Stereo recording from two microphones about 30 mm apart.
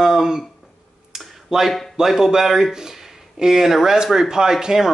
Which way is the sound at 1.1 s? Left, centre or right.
Centre.